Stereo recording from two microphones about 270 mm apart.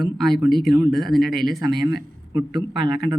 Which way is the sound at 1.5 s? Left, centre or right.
Centre.